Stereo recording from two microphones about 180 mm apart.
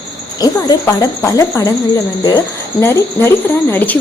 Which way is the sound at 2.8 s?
10° left (ahead or behind).